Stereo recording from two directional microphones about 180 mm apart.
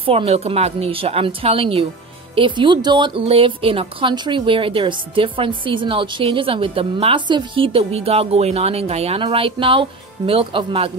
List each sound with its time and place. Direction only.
0.0 s a woman's voice: 30° right (ahead or behind)